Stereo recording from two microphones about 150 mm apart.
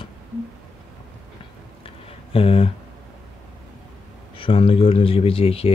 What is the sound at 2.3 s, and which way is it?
Speech, 40° left (ahead or behind).